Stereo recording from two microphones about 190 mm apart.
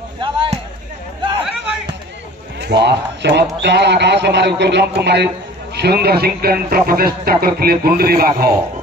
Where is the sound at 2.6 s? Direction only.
60° right (ahead or behind).